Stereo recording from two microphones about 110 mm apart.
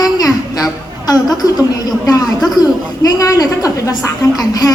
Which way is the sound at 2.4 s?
Centre (ahead or behind).